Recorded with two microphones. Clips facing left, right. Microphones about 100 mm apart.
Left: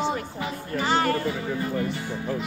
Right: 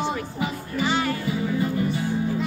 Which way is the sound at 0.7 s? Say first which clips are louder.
Left 2 dB; 45° left (ahead or behind).